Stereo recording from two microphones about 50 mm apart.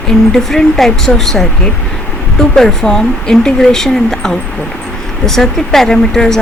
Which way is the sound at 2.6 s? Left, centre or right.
Centre.